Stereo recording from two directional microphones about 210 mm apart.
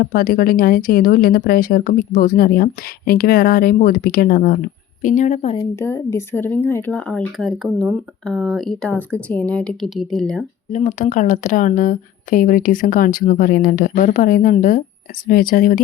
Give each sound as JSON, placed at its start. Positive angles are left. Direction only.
{"t": 0.0, "sound": "a woman's voice", "side_deg": 45}
{"t": 5.5, "sound": "speech", "side_deg": 10}
{"t": 10.7, "sound": "a woman's voice", "side_deg": 35}